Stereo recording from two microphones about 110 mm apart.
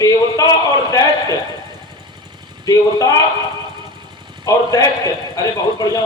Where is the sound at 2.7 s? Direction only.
35° left (ahead or behind).